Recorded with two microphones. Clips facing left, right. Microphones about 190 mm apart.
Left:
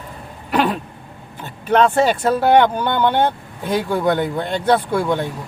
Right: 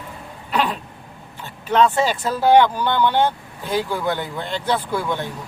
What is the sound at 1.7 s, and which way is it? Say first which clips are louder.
Speech: left 3 dB; 60° left (ahead or behind).